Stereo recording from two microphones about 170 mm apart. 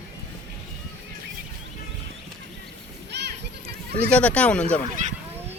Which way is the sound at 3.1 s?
90° right.